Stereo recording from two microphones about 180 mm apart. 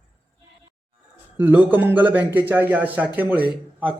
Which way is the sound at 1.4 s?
10° right (ahead or behind).